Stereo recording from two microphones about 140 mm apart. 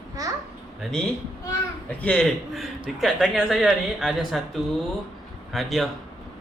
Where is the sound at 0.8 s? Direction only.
5° left (ahead or behind).